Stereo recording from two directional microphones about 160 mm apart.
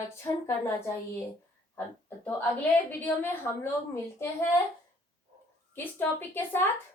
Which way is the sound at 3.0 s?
10° left (ahead or behind).